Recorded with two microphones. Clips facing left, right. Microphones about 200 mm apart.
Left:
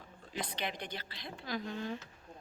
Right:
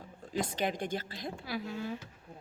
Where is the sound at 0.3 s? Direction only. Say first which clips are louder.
Right 7 dB; 45° right (ahead or behind).